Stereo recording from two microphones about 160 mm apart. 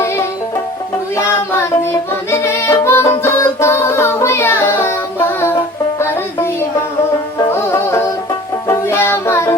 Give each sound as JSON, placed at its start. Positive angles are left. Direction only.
{"t": 2.4, "sound": "music", "side_deg": 15}
{"t": 6.0, "sound": "music", "side_deg": 15}
{"t": 8.6, "sound": "child singing", "side_deg": 20}